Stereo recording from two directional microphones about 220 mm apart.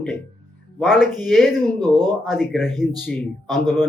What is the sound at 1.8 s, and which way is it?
Speech, 20° right (ahead or behind).